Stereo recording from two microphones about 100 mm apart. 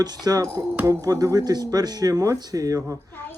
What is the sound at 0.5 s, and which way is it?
Speech, 20° right (ahead or behind).